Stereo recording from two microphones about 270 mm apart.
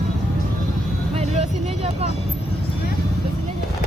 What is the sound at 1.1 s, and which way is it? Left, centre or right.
Vehicle, right.